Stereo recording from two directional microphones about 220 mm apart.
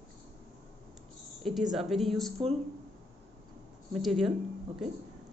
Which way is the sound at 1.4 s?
Centre (ahead or behind).